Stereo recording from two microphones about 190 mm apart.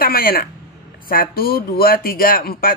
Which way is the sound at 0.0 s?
50° left (ahead or behind).